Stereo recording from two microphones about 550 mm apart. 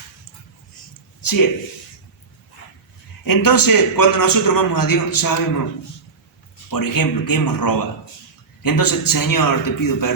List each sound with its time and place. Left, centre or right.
1.2 s a sound: left
3.2 s a man's voice: left
6.7 s a man's voice: left